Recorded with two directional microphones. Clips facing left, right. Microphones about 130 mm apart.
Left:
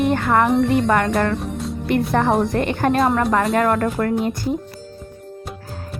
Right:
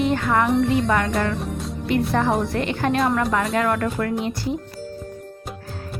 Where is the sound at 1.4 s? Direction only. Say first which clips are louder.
Left 2 dB; centre (ahead or behind).